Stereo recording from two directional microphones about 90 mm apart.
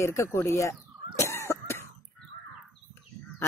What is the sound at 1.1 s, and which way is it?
Cough, 30° left (ahead or behind).